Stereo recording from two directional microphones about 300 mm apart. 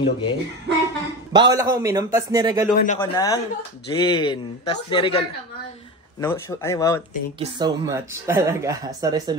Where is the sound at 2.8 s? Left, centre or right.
Left.